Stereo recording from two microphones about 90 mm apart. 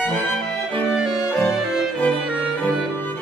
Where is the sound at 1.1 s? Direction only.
30° left (ahead or behind).